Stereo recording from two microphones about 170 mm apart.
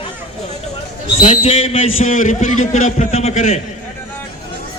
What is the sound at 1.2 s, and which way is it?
A man's voice, 35° left (ahead or behind).